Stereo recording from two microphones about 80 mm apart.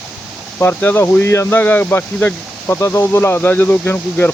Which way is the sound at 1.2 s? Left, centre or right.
Left.